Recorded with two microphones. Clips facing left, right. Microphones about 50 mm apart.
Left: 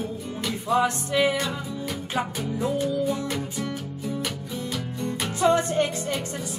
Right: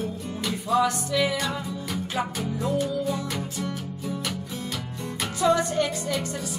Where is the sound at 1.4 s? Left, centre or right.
Centre.